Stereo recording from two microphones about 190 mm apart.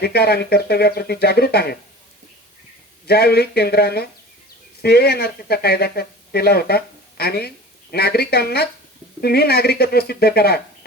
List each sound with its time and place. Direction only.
0.0 s speech: 55° left (ahead or behind)
3.1 s speech: 55° left (ahead or behind)